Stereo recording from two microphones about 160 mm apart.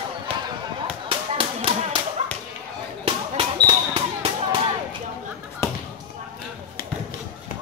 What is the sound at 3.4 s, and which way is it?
Basketball bounce, 25° right (ahead or behind).